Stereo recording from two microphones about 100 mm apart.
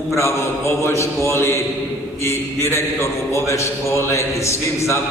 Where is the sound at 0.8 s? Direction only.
30° left (ahead or behind).